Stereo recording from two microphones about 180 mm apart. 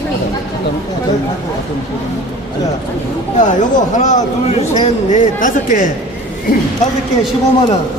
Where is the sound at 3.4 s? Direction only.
45° left (ahead or behind).